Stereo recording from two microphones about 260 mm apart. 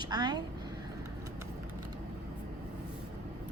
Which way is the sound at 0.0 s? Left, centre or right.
Centre.